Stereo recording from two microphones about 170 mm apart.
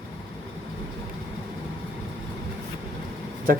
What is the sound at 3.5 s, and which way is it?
Speech, 55° right (ahead or behind).